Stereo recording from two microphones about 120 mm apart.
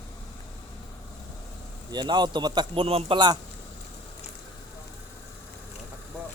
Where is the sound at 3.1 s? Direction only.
35° right (ahead or behind).